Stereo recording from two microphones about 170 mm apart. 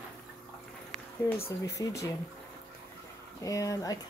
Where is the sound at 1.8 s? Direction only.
20° left (ahead or behind).